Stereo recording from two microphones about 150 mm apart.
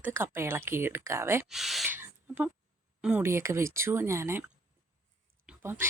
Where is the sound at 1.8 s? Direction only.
15° right (ahead or behind).